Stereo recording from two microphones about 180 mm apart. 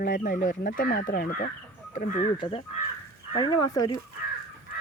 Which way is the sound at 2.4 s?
30° left (ahead or behind).